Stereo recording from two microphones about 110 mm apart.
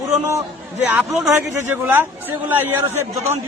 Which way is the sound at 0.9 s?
10° right (ahead or behind).